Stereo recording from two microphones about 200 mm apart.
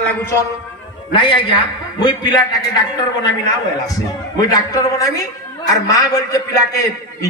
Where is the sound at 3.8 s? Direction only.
15° left (ahead or behind).